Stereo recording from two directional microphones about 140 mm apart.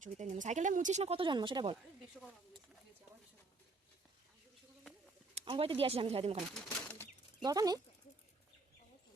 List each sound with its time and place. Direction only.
0.0 s speech: 60° right (ahead or behind); by 1.8 s 35° right (ahead or behind)
5.5 s speech: 40° right (ahead or behind)
6.7 s bird flight: 15° left (ahead or behind)
7.4 s speech: 25° right (ahead or behind)